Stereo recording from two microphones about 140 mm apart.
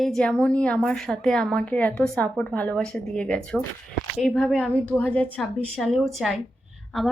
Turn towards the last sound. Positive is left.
turn(degrees=0)  # may be behind; listen again after turning